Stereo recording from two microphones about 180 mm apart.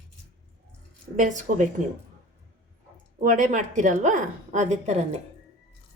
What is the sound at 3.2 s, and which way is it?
A woman's voice, 45° right (ahead or behind).